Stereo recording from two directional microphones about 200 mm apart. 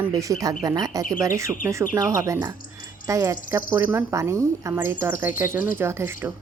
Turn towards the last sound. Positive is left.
turn(degrees=-10)  # may be behind; listen again after turning